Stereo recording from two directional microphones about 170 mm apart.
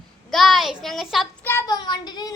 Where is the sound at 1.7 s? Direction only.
25° left (ahead or behind).